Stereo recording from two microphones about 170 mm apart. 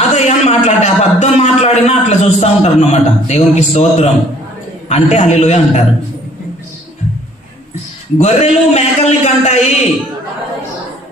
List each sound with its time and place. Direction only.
0.1 s a man's voice: 40° left (ahead or behind)
8.2 s a man's voice: 40° left (ahead or behind)